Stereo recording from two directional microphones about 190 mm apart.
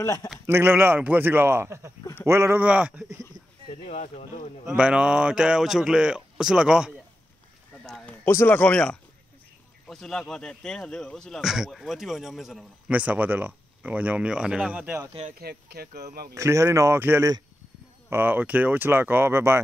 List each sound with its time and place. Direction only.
0.0 s speech: 15° left (ahead or behind)
0.5 s speech: 10° right (ahead or behind)
3.8 s speech: 35° left (ahead or behind)
4.6 s speech: 5° right (ahead or behind)
7.8 s a sound: 5° left (ahead or behind)
9.8 s speech: centre (ahead or behind)
15.3 s speech: 55° right (ahead or behind)
16.3 s speech: 15° right (ahead or behind)